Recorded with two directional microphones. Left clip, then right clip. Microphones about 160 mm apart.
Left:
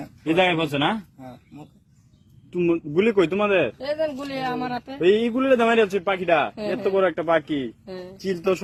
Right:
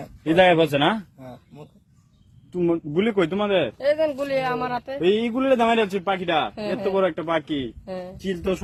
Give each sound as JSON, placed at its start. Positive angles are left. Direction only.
{"t": 0.3, "sound": "a man's voice", "side_deg": -90}
{"t": 2.6, "sound": "a man's voice", "side_deg": -55}
{"t": 7.0, "sound": "speech", "side_deg": -25}
{"t": 7.9, "sound": "a man's voice", "side_deg": -40}
{"t": 8.2, "sound": "speech", "side_deg": -30}